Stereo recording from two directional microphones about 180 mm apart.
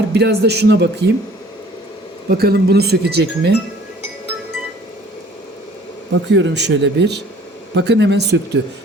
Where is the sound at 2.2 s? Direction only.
60° right (ahead or behind).